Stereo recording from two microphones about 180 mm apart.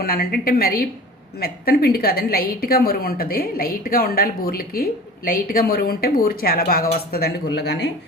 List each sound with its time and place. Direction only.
0.0 s a woman's voice: 55° left (ahead or behind)